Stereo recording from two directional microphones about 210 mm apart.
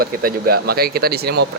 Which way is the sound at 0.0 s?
45° right (ahead or behind).